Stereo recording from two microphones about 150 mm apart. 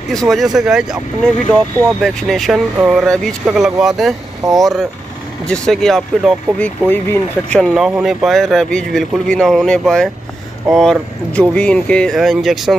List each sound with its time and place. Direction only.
0.1 s speech: centre (ahead or behind)
4.4 s speech: 20° right (ahead or behind)
5.5 s speech: 5° left (ahead or behind)
6.9 s speech: 10° left (ahead or behind)